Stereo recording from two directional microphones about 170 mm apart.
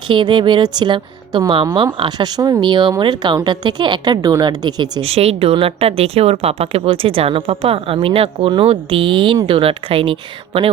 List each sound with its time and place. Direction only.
0.1 s speech: 30° right (ahead or behind)